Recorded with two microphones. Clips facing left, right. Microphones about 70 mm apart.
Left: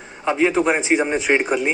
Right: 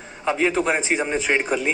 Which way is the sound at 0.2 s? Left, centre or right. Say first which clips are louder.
Left 3 dB; centre.